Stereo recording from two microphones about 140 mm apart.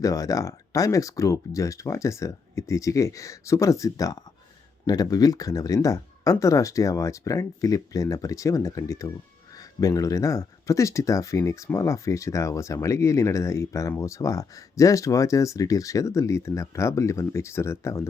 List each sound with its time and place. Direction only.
0.0 s speech: 25° left (ahead or behind)